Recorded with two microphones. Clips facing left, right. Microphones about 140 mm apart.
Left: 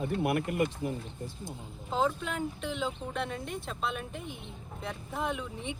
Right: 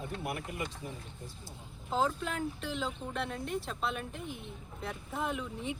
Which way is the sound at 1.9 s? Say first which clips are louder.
Left 2 dB; centre (ahead or behind).